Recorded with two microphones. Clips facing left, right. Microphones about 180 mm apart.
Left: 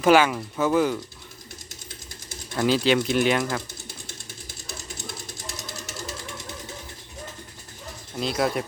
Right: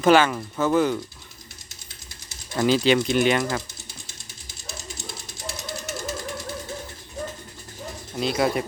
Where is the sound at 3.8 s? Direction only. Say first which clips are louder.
Left 4 dB; 55° left (ahead or behind).